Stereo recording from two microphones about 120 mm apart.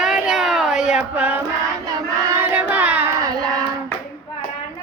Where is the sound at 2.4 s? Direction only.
15° right (ahead or behind).